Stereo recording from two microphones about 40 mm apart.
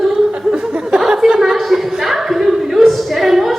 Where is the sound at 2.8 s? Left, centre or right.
Centre.